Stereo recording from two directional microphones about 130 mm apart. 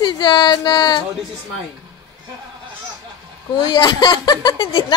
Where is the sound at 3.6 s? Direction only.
30° left (ahead or behind).